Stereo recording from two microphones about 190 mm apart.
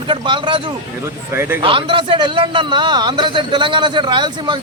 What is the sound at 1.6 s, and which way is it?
A man's voice, 30° right (ahead or behind).